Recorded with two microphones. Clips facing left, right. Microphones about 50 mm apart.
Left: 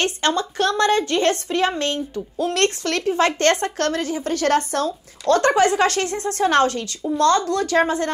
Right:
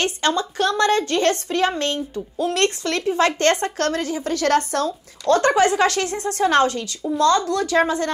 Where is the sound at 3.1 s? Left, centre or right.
Left.